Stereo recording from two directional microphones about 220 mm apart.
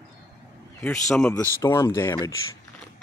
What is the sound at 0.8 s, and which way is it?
Speech, 5° left (ahead or behind).